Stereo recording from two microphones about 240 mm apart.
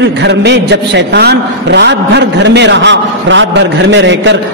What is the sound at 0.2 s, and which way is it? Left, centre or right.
A man's voice, right.